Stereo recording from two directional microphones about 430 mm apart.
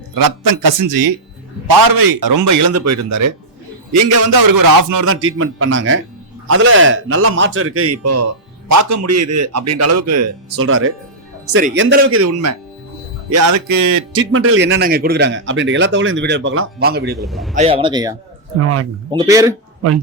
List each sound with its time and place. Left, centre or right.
0.2 s a man's voice: right
4.4 s a man's voice: right
5.0 s a man's voice: right
14.1 s speech: right
17.2 s a man's voice: centre
17.5 s a man's voice: centre
18.6 s a man's voice: right
19.1 s a man's voice: centre